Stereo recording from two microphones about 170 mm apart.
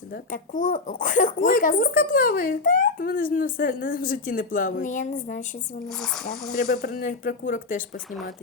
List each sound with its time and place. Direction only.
0.1 s speech: 55° left (ahead or behind)
5.9 s speech: centre (ahead or behind)
6.8 s speech: 55° left (ahead or behind)